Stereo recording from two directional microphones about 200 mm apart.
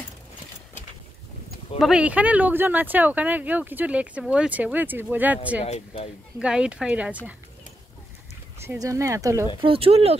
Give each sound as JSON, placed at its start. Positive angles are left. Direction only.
{"t": 1.8, "sound": "speech", "side_deg": -5}
{"t": 8.6, "sound": "speech", "side_deg": -15}
{"t": 9.6, "sound": "speech", "side_deg": -30}